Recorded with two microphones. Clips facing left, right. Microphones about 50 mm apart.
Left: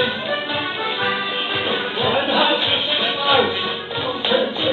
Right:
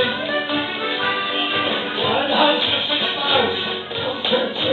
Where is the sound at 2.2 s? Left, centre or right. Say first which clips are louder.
Right 2 dB; centre.